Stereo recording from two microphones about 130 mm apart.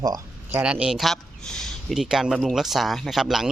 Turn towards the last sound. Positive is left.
turn(degrees=0)  # may be behind; listen again after turning